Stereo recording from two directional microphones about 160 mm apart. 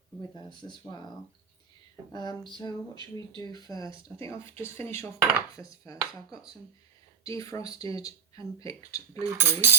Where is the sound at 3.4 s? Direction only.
25° left (ahead or behind).